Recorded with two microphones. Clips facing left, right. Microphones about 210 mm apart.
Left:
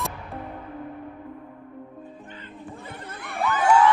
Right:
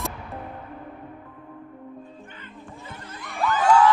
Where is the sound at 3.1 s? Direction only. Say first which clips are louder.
Left 2 dB; 60° left (ahead or behind).